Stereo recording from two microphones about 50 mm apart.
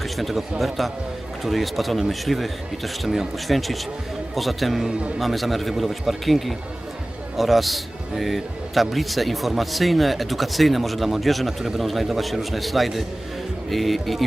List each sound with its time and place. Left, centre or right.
0.0 s a man's voice: centre
4.9 s a man's voice: centre
5.2 s a man's voice: centre